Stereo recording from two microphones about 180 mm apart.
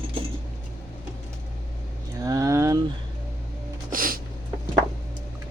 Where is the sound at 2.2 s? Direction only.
20° right (ahead or behind).